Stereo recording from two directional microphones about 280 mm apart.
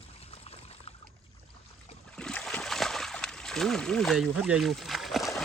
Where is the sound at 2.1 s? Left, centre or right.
Centre.